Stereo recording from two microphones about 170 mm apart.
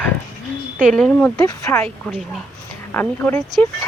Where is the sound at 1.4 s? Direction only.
20° left (ahead or behind).